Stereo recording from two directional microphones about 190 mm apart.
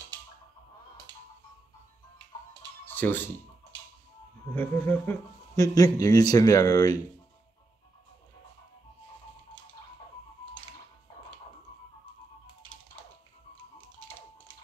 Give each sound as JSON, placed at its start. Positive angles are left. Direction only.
{"t": 1.1, "sound": "music", "side_deg": -20}
{"t": 2.8, "sound": "music", "side_deg": 10}
{"t": 4.6, "sound": "speech", "side_deg": 10}